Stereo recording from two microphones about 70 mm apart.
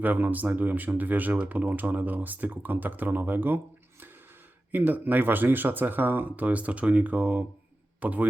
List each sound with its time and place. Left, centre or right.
0.0 s speech: right
4.7 s speech: right